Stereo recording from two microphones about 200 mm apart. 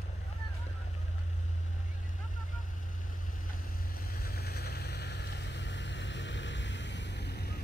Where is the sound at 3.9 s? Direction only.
50° left (ahead or behind).